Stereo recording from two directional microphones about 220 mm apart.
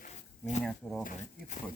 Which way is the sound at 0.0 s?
35° left (ahead or behind).